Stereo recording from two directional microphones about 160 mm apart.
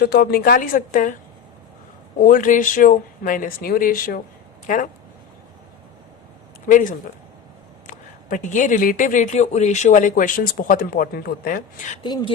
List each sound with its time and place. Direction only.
0.0 s speech: 75° left (ahead or behind); by 1.1 s 55° left (ahead or behind)
2.2 s speech: 55° left (ahead or behind)
6.7 s speech: 55° left (ahead or behind)
12.0 s speech: 30° left (ahead or behind)